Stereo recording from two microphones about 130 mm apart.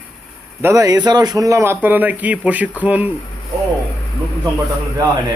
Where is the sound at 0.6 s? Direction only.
25° right (ahead or behind).